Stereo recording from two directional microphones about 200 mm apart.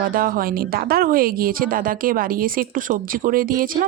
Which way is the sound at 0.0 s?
45° right (ahead or behind).